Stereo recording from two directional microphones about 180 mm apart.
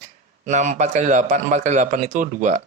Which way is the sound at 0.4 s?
40° right (ahead or behind).